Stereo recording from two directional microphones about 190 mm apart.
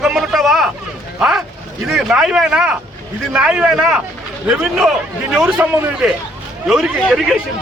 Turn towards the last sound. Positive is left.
turn(degrees=0)  # may be behind; listen again after turning